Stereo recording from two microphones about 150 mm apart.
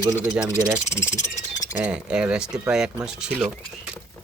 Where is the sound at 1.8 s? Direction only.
5° right (ahead or behind).